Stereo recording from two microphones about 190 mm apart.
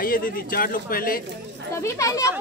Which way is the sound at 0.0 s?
45° left (ahead or behind).